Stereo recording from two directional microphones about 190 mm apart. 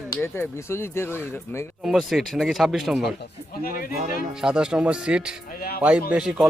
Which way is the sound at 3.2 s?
50° left (ahead or behind).